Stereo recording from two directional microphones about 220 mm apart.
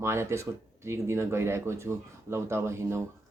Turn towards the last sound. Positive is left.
turn(degrees=-10)  # may be behind; listen again after turning